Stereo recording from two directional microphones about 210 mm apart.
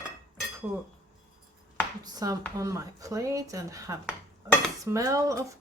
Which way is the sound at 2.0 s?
15° right (ahead or behind).